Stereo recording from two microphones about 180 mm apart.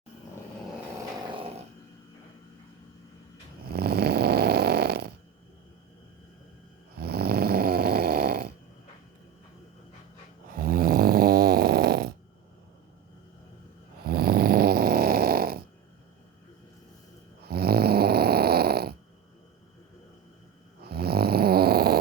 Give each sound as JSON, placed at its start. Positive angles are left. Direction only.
{"t": 3.7, "sound": "snoring", "side_deg": -60}
{"t": 7.0, "sound": "snoring", "side_deg": -60}
{"t": 10.6, "sound": "snoring", "side_deg": -55}
{"t": 14.1, "sound": "snoring", "side_deg": -55}
{"t": 17.4, "sound": "snoring", "side_deg": -60}
{"t": 20.8, "sound": "snoring", "side_deg": -60}